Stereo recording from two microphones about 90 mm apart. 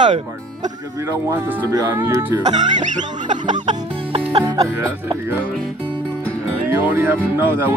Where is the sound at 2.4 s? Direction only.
55° right (ahead or behind).